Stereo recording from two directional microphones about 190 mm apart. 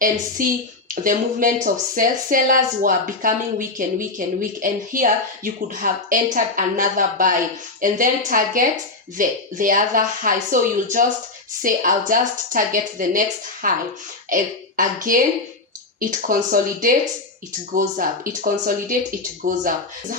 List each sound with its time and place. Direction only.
0.4 s a child's voice: 45° right (ahead or behind)